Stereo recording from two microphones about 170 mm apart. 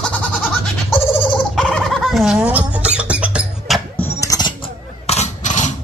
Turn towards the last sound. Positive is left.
turn(degrees=45)  # may be behind; listen again after turning